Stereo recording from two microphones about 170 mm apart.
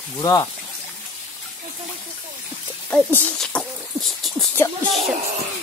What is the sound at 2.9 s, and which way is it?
Speech, 10° left (ahead or behind).